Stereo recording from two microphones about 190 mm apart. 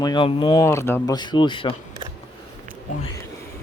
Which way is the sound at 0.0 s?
25° left (ahead or behind).